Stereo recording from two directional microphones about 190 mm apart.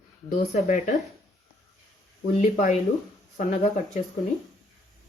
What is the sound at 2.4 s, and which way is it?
Speech, 40° left (ahead or behind).